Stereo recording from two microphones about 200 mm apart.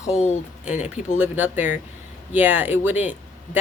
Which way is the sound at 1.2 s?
10° right (ahead or behind).